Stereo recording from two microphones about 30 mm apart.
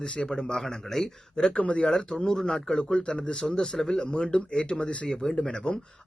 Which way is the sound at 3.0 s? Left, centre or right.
Left.